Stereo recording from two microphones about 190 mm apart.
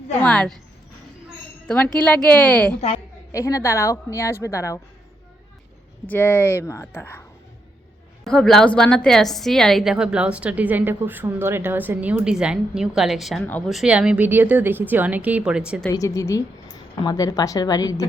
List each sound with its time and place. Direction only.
0.2 s a woman's voice: 5° left (ahead or behind)
1.6 s a woman's voice: 5° left (ahead or behind)
6.1 s a woman's voice: 10° left (ahead or behind)
8.2 s a woman's voice: 5° left (ahead or behind)
15.9 s a woman's voice: 15° left (ahead or behind)